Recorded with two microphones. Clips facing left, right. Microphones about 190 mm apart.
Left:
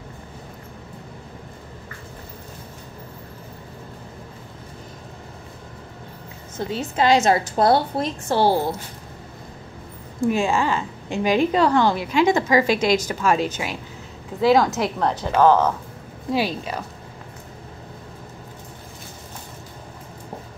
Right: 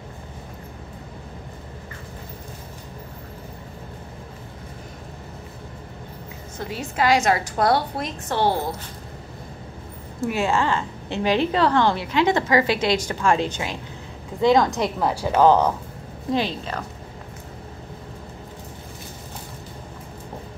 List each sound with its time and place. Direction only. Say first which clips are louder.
6.7 s a woman's voice: left 2 dB; 25° left (ahead or behind)
10.3 s a woman's voice: right 1 dB; 15° left (ahead or behind)
14.4 s a woman's voice: left 1 dB; 5° left (ahead or behind); by 15.7 s 15° right (ahead or behind)
16.3 s a woman's voice: left 2 dB; 10° left (ahead or behind)